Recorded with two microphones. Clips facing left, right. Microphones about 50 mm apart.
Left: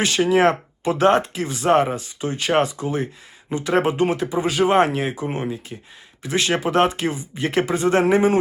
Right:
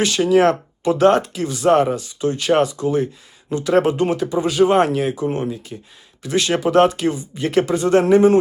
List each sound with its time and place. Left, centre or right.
0.0 s speech: left